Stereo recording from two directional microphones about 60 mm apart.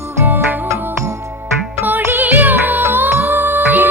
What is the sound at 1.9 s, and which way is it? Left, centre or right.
Music, right.